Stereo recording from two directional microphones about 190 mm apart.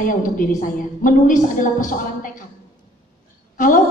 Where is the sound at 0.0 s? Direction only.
45° left (ahead or behind).